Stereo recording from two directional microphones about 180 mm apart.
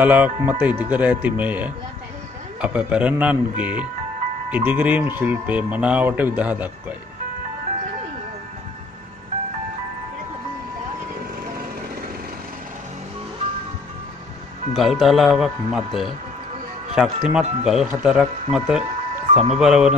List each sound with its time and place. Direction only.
0.0 s speech: 10° right (ahead or behind)
14.7 s speech: centre (ahead or behind)
19.3 s speech: 35° right (ahead or behind)
19.6 s speech: 5° right (ahead or behind)